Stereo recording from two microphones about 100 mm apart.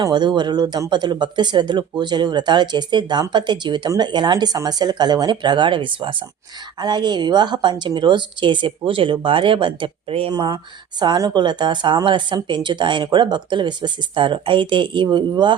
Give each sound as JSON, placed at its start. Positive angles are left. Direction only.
{"t": 0.0, "sound": "speech", "side_deg": -45}
{"t": 6.7, "sound": "speech", "side_deg": -45}
{"t": 10.3, "sound": "speech", "side_deg": -40}